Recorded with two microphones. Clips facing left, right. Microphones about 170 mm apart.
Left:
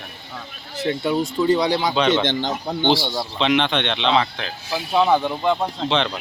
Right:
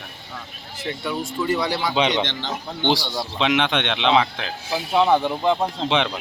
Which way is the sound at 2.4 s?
45° left (ahead or behind).